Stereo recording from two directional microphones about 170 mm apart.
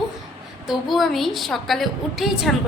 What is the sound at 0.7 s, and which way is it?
A woman's voice, centre (ahead or behind).